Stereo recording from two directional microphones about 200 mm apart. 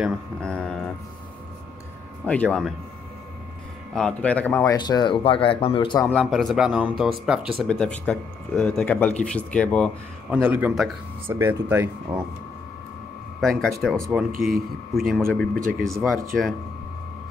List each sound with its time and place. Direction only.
0.0 s speech: centre (ahead or behind)
2.2 s speech: 5° left (ahead or behind)
3.9 s speech: 5° left (ahead or behind); by 6.0 s 25° left (ahead or behind)
6.0 s speech: 5° left (ahead or behind)
10.3 s speech: 10° right (ahead or behind)
13.4 s speech: centre (ahead or behind)